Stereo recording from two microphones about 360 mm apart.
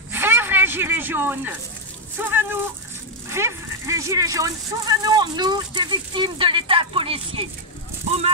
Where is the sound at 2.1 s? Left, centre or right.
Centre.